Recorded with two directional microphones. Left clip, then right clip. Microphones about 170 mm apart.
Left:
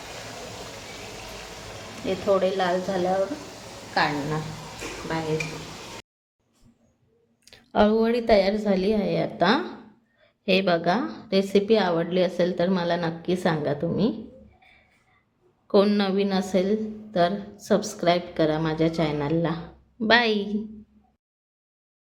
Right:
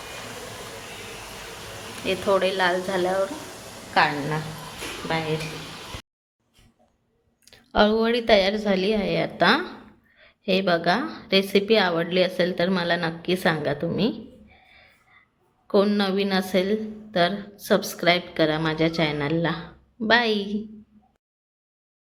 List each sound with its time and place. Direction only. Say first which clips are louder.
2.0 s a woman's voice: right 1 dB; centre (ahead or behind)
3.9 s a woman's voice: right 3 dB; 20° right (ahead or behind)
7.4 s a woman's voice: right 1 dB; centre (ahead or behind)
14.6 s a sound: right 3 dB; centre (ahead or behind)
15.6 s a woman's voice: even; centre (ahead or behind)